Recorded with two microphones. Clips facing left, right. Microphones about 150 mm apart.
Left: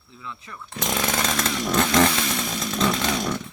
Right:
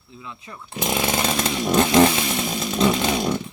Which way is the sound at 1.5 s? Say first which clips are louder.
Right 5 dB; 20° right (ahead or behind).